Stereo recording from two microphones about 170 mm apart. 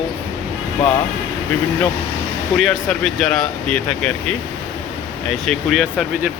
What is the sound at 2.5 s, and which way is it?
Speech, centre (ahead or behind).